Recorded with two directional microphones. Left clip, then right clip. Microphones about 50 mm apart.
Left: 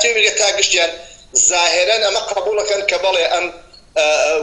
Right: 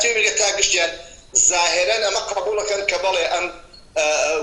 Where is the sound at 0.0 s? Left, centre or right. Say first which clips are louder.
Left 4 dB; right.